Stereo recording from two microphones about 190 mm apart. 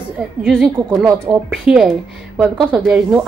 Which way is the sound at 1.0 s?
15° right (ahead or behind).